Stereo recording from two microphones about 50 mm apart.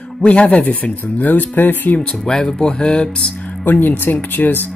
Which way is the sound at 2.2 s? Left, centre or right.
Centre.